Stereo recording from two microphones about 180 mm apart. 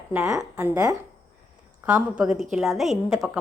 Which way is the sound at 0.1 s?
15° right (ahead or behind).